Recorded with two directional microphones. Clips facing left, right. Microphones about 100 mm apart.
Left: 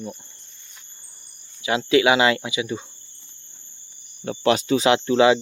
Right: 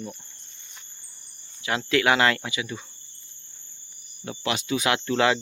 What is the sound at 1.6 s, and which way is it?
Speech, 15° left (ahead or behind).